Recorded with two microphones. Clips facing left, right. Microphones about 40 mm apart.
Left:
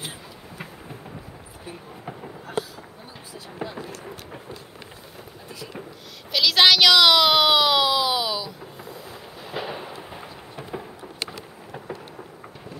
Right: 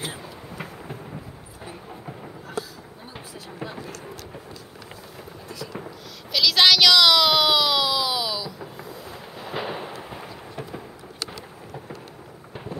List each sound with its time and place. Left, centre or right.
6.3 s a sound: centre
9.5 s fireworks: centre
10.0 s thunder: centre
10.5 s thunder: centre